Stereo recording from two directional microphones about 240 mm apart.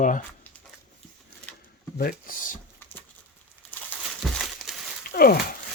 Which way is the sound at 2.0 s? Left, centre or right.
Left.